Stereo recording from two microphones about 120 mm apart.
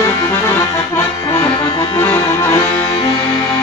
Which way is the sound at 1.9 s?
25° left (ahead or behind).